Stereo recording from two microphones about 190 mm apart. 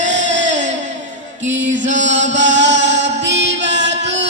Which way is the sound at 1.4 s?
85° right.